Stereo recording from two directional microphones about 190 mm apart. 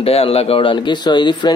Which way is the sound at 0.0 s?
30° left (ahead or behind).